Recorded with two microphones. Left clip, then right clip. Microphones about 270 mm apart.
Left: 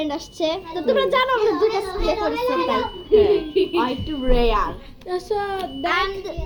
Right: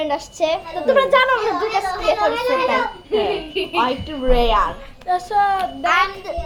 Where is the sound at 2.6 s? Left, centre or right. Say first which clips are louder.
Right 2 dB; centre.